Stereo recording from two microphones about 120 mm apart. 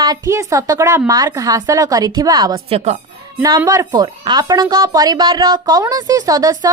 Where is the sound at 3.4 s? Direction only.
35° right (ahead or behind).